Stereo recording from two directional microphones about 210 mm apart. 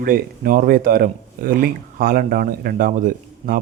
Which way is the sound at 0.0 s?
40° right (ahead or behind).